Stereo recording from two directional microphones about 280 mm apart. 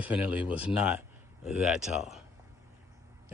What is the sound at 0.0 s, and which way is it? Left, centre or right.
Speech, centre.